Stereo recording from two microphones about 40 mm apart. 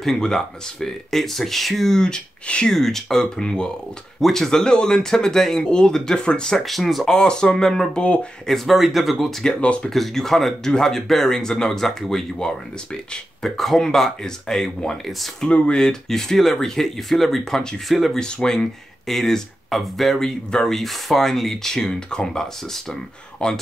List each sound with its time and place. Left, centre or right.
0.0 s speech: centre
2.7 s speech: centre
6.6 s speech: centre
7.1 s speech: centre
7.9 s speech: left
8.5 s speech: centre
9.6 s speech: left
9.8 s speech: centre
13.6 s speech: centre
15.4 s speech: left
15.8 s speech: centre
17.8 s speech: centre
18.1 s speech: centre
23.4 s speech: left